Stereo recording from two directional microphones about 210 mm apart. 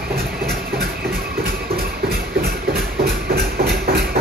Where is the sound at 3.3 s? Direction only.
50° right (ahead or behind).